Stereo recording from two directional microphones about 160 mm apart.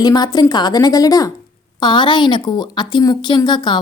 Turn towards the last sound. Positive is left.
turn(degrees=30)  # may be behind; listen again after turning